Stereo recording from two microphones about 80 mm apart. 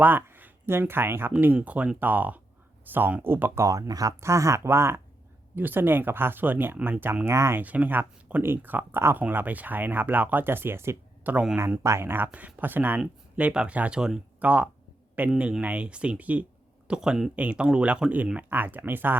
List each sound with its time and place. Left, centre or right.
0.0 s speech: right
7.6 s speech: centre
11.8 s speech: right